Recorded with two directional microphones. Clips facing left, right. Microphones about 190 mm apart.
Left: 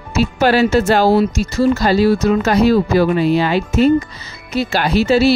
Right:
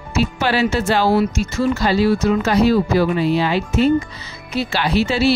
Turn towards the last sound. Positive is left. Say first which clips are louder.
# left 4 dB
turn(degrees=40)  # may be behind; listen again after turning